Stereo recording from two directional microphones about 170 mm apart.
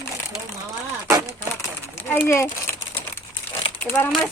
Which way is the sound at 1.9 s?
10° left (ahead or behind).